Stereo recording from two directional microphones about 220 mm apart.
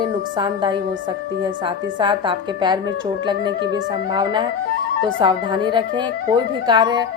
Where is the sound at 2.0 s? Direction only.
20° right (ahead or behind).